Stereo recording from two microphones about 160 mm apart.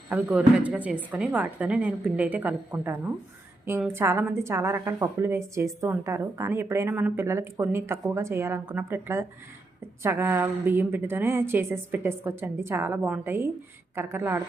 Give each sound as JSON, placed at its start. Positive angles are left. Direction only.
{"t": 0.1, "sound": "a woman's voice", "side_deg": -10}